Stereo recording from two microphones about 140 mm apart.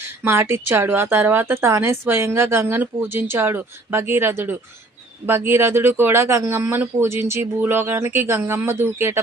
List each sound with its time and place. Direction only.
0.3 s speech: 15° right (ahead or behind)